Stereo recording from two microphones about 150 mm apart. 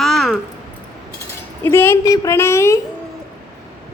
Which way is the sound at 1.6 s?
15° left (ahead or behind).